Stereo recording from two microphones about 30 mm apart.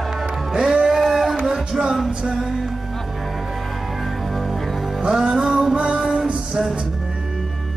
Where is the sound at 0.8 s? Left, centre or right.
Centre.